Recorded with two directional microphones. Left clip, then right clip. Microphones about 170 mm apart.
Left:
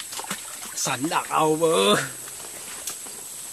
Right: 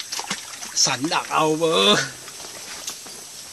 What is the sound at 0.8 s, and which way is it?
Speech, centre (ahead or behind).